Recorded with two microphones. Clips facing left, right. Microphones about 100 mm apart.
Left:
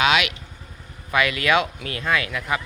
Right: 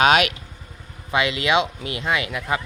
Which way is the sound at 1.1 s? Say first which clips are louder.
Even; 25° right (ahead or behind).